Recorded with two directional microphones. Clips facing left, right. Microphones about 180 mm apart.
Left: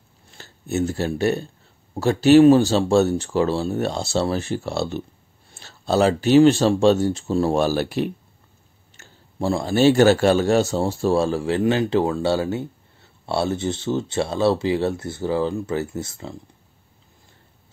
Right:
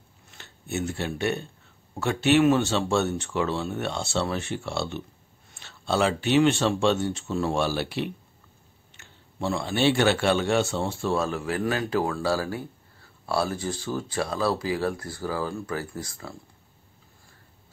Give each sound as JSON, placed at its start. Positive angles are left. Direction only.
{"t": 0.3, "sound": "a man's voice", "side_deg": 35}